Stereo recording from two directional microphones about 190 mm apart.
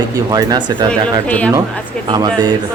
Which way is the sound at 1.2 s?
5° left (ahead or behind).